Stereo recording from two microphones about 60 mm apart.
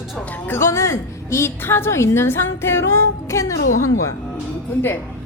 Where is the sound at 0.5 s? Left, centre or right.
Left.